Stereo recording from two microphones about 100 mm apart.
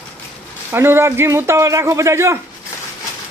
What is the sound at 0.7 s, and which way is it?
A man's voice, 25° right (ahead or behind).